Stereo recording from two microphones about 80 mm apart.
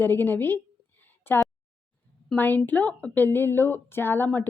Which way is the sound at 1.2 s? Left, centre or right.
Left.